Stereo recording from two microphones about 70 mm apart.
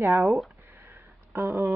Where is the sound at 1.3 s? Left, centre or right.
Right.